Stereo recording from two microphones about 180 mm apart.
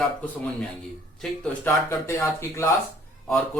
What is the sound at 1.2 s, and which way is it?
Speech, 15° left (ahead or behind).